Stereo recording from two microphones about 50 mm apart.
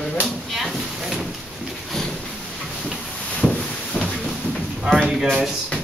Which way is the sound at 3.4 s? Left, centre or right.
Centre.